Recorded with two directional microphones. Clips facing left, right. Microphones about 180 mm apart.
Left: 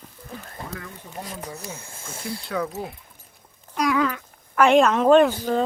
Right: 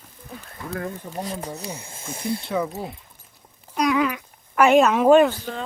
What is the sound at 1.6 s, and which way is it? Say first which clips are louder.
Speech: right 3 dB; 15° right (ahead or behind).